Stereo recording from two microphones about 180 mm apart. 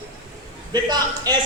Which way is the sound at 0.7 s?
25° right (ahead or behind).